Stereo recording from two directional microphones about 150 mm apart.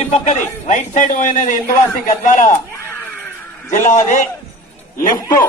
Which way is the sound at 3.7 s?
55° left (ahead or behind).